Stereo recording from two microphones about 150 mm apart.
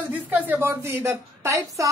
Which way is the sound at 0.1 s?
10° right (ahead or behind).